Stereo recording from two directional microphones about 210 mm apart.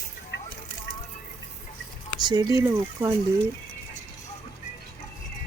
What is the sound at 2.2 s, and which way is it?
Speech, 20° right (ahead or behind).